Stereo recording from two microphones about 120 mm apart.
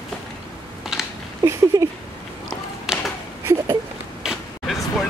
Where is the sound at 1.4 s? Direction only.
20° right (ahead or behind).